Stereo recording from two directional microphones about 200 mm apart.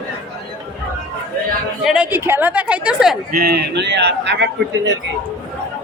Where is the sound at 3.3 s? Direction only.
50° right (ahead or behind).